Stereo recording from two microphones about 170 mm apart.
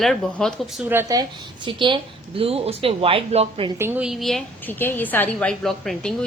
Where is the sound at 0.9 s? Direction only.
15° right (ahead or behind); by 3.7 s 35° right (ahead or behind).